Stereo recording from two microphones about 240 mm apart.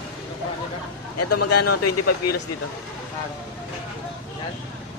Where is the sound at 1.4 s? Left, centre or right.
Left.